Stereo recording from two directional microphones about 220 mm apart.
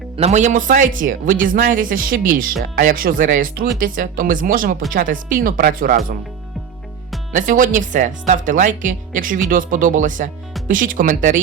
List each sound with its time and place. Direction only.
0.2 s speech: 30° right (ahead or behind)
7.3 s speech: 35° right (ahead or behind)